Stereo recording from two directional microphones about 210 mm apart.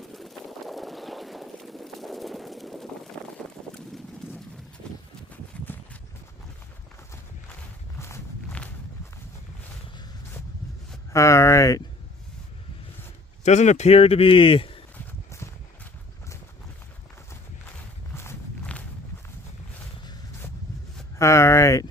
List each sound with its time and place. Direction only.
0.1 s a sound: centre (ahead or behind)
3.8 s clip-clop: 5° left (ahead or behind)
5.3 s a sound: 5° left (ahead or behind)
7.9 s walk: 10° left (ahead or behind)
11.1 s speech: 15° left (ahead or behind)
13.4 s a man's voice: 35° left (ahead or behind)
15.3 s horse: 10° left (ahead or behind)
18.1 s walk: 10° left (ahead or behind)
21.2 s a sound: 15° left (ahead or behind)